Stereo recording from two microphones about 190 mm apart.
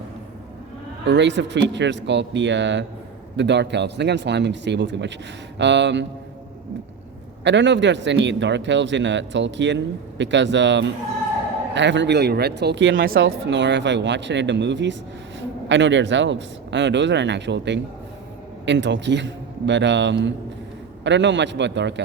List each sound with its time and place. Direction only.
1.0 s speech: 65° right (ahead or behind)
7.4 s speech: 70° right (ahead or behind)
13.0 s speech: 50° right (ahead or behind)
13.2 s speech: 70° right (ahead or behind)